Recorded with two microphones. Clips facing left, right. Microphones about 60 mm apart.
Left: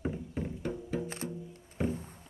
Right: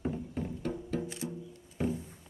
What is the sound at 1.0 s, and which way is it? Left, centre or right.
Music, left.